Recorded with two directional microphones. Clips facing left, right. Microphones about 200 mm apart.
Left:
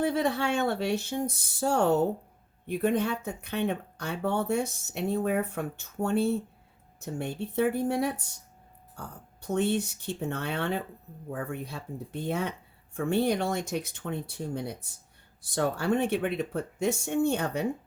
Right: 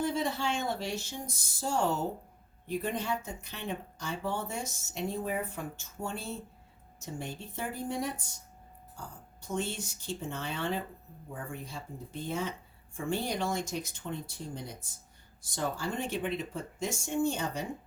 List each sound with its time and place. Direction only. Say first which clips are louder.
0.0 s speech: left 5 dB; 60° left (ahead or behind)